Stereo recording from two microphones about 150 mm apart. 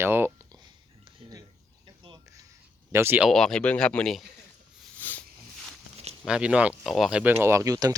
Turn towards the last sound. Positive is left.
turn(degrees=-25)  # may be behind; listen again after turning